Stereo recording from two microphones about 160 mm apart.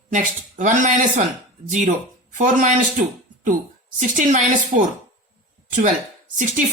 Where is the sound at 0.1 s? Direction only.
55° right (ahead or behind).